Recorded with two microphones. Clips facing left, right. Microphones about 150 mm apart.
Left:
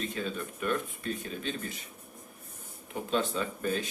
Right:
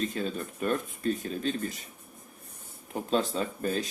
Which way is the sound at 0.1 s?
40° right (ahead or behind).